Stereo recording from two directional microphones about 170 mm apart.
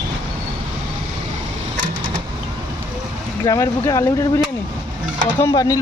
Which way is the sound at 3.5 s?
20° left (ahead or behind).